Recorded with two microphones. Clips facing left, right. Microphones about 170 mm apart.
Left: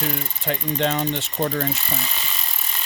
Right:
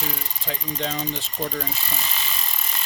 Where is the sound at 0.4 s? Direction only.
70° left (ahead or behind).